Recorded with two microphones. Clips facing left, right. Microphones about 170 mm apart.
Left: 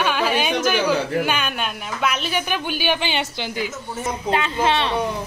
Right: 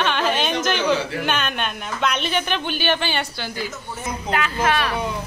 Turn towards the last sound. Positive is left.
turn(degrees=25)  # may be behind; listen again after turning